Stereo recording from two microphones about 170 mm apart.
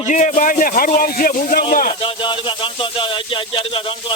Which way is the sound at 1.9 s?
30° left (ahead or behind).